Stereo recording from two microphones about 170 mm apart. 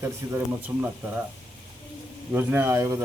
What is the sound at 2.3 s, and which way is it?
Speech, 15° right (ahead or behind).